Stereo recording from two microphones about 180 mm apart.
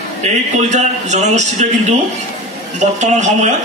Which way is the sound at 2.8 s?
40° right (ahead or behind).